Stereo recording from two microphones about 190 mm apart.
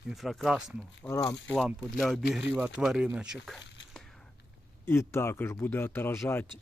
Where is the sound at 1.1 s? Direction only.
20° left (ahead or behind).